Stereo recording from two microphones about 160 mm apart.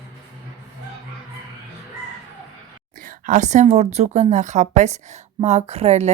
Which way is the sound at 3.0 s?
55° right (ahead or behind).